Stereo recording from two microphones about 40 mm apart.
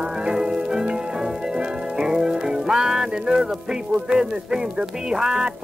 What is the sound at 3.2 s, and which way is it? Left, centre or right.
Speech, centre.